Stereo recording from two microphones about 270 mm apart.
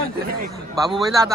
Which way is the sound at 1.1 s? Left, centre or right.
Centre.